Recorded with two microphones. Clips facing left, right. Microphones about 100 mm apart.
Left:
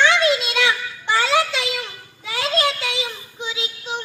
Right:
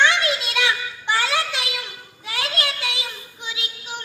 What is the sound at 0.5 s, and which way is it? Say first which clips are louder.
Child singing: left 2 dB; 15° right (ahead or behind).